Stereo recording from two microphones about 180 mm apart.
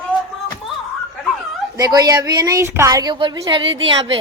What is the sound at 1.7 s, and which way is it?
Speech, 20° right (ahead or behind).